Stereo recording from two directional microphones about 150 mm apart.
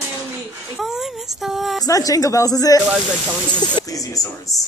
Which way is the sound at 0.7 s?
Centre (ahead or behind).